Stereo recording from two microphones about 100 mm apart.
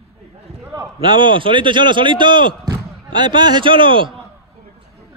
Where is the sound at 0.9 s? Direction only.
50° right (ahead or behind).